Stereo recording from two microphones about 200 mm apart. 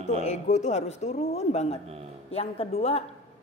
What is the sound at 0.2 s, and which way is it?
A woman's voice, 35° left (ahead or behind).